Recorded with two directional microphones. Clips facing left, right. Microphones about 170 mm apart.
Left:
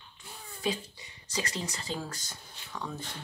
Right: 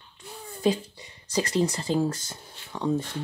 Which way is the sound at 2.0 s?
25° right (ahead or behind).